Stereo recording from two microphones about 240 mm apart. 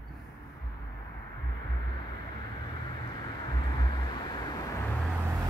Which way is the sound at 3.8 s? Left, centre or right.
Centre.